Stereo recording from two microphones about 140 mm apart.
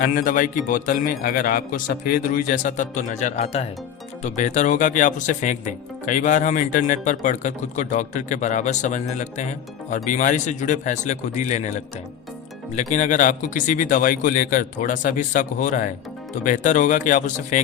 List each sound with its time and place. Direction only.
0.0 s a man's voice: 85° left; by 11.7 s 60° left (ahead or behind)
12.7 s a man's voice: 60° left (ahead or behind)